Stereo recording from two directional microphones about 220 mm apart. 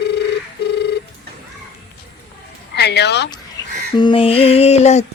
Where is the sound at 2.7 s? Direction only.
50° left (ahead or behind).